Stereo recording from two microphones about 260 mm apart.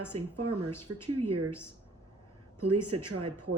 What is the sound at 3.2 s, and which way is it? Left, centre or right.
Speech, right.